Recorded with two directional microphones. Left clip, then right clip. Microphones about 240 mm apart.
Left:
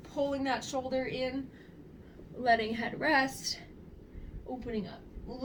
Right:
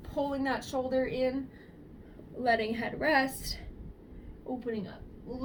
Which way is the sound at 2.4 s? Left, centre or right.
Centre.